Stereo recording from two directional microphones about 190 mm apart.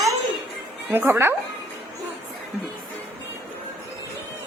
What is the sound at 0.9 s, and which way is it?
Speech, 10° right (ahead or behind).